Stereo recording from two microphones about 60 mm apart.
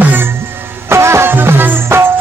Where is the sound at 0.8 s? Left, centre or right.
Right.